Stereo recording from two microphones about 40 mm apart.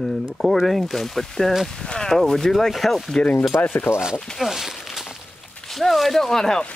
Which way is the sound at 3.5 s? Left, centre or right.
Left.